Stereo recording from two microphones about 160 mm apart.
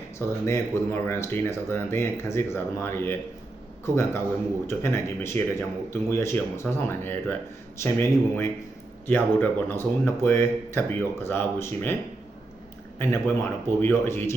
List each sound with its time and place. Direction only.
0.2 s speech: 15° left (ahead or behind)
13.0 s speech: 15° left (ahead or behind)